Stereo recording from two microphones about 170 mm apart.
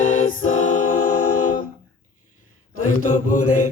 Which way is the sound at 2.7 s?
50° left (ahead or behind).